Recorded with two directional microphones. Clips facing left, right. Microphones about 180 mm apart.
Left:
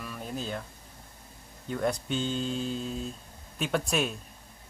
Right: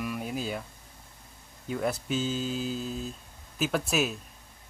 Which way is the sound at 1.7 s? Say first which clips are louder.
Even; 5° right (ahead or behind).